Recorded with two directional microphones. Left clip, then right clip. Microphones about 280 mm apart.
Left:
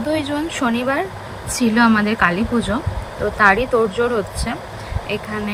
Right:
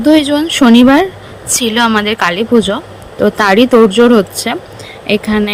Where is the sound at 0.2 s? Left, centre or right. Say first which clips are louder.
Right 10 dB; centre.